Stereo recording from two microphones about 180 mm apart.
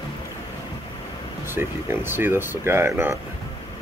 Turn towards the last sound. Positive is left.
turn(degrees=-15)  # may be behind; listen again after turning